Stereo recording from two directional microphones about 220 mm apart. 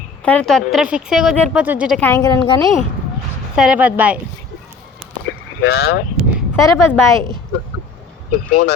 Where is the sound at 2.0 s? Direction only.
15° left (ahead or behind).